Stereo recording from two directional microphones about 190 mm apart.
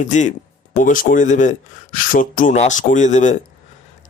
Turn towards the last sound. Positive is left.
turn(degrees=40)  # may be behind; listen again after turning